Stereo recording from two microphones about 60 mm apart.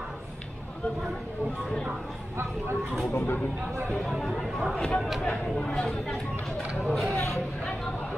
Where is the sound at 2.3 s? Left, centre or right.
Right.